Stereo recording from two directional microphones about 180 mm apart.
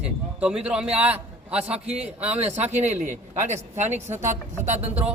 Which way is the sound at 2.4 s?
35° right (ahead or behind).